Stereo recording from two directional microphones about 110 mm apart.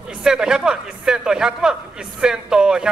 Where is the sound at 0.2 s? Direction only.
5° right (ahead or behind).